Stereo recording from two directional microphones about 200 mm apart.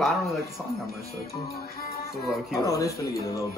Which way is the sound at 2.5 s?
15° left (ahead or behind).